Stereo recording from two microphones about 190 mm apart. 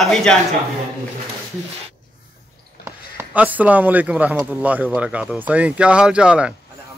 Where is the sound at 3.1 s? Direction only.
10° right (ahead or behind).